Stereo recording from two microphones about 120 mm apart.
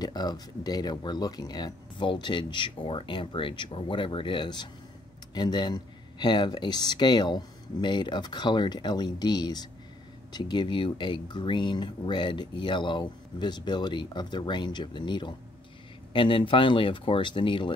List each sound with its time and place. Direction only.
0.0 s speech: 35° left (ahead or behind)